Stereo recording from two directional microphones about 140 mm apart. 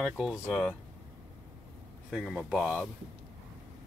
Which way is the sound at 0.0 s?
Centre (ahead or behind).